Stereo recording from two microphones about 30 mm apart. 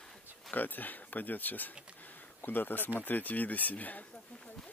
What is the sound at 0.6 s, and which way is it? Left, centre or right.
Speech, left.